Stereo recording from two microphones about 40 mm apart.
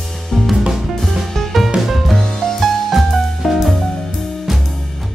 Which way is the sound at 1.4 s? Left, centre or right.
Centre.